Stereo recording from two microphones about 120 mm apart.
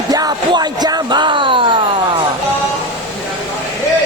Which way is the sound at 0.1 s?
30° right (ahead or behind).